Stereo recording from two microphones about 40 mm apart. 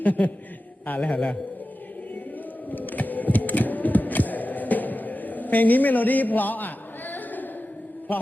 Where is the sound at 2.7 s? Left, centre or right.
Left.